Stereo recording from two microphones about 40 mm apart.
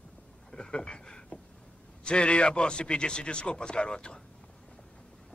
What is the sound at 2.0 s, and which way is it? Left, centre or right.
A man's voice, left.